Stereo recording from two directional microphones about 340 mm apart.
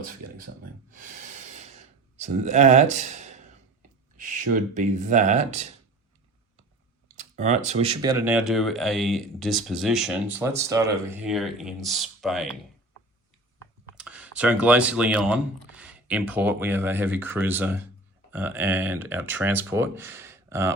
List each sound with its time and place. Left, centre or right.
0.9 s snort: right
1.5 s a sound: centre
4.2 s speech: right
7.2 s speech: right; by 12.5 s centre
13.9 s speech: centre